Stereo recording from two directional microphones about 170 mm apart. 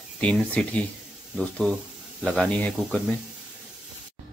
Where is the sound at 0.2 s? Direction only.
10° left (ahead or behind).